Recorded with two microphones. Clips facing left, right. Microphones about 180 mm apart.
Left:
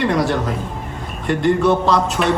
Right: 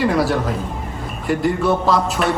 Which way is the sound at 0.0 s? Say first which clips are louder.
Even; 5° right (ahead or behind).